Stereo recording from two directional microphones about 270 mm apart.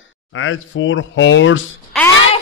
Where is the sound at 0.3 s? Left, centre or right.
Left.